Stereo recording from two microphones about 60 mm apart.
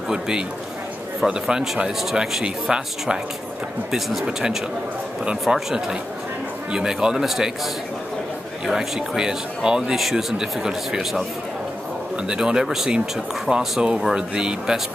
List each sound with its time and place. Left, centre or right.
0.1 s speech: centre
8.6 s speech: centre
12.3 s speech: centre